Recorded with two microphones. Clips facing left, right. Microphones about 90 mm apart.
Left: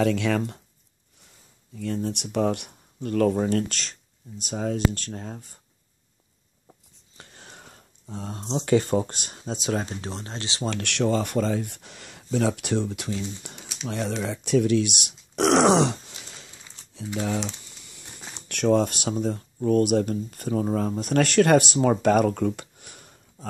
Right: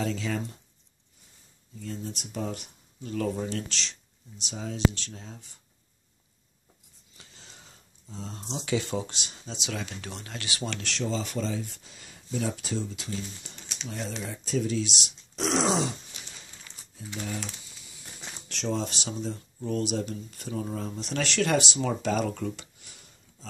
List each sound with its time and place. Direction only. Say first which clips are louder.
0.0 s speech: left 8 dB; 65° left (ahead or behind)
1.8 s speech: left 8 dB; 65° left (ahead or behind); by 5.6 s 50° left (ahead or behind)
7.2 s a sound: left 6 dB; 55° left (ahead or behind)
8.4 s speech: left 9 dB; 35° left (ahead or behind)
8.7 s speech: left 8 dB; 45° left (ahead or behind); by 10.7 s 30° left (ahead or behind)
10.8 s speech: left 10 dB; 60° left (ahead or behind)
13.8 s speech: left 8 dB; 75° left (ahead or behind)
18.5 s speech: left 10 dB; 55° left (ahead or behind)